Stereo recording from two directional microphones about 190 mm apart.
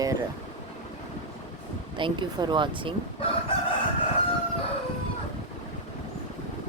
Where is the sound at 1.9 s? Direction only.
25° right (ahead or behind).